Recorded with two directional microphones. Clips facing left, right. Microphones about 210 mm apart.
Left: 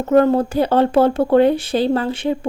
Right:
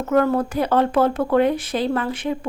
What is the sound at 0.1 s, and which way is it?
Speech, 25° left (ahead or behind).